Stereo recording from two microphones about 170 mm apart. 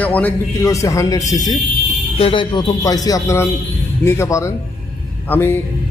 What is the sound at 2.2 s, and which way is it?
A man's voice, 30° left (ahead or behind).